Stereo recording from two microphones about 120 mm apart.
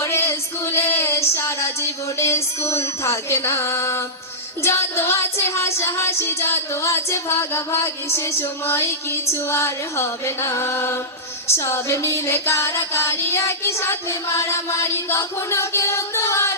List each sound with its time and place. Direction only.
0.0 s female singing: 20° left (ahead or behind)
4.6 s music: 20° left (ahead or behind)